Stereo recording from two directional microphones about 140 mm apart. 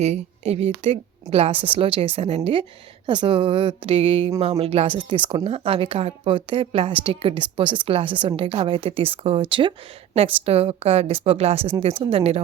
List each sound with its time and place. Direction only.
0.0 s a woman's voice: 50° right (ahead or behind)